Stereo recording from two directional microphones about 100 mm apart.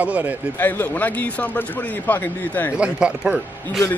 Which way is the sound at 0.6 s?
20° left (ahead or behind).